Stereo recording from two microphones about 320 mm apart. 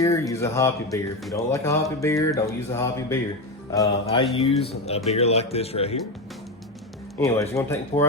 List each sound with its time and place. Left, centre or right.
0.0 s speech: centre
7.3 s speech: centre